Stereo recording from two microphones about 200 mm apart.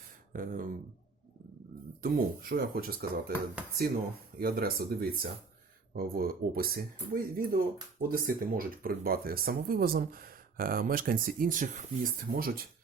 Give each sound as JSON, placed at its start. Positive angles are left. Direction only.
{"t": 0.3, "sound": "speech", "side_deg": -45}
{"t": 2.0, "sound": "speech", "side_deg": -45}
{"t": 4.4, "sound": "speech", "side_deg": -50}